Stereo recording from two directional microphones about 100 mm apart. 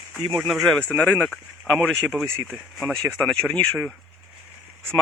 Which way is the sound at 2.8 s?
5° left (ahead or behind).